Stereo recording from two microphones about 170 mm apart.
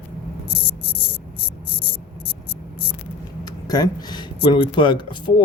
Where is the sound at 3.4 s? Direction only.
20° left (ahead or behind).